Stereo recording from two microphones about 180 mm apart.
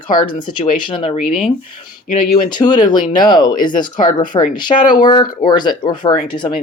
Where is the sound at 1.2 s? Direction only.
Centre (ahead or behind).